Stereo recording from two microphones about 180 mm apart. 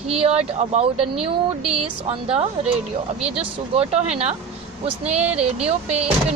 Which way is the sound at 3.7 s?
35° right (ahead or behind).